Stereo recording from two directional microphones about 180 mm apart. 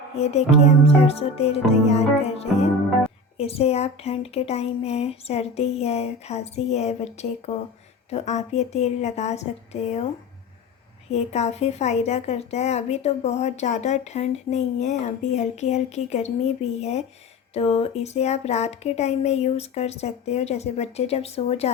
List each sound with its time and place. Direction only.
0.2 s a woman's voice: 35° left (ahead or behind)
11.1 s a woman's voice: 40° left (ahead or behind)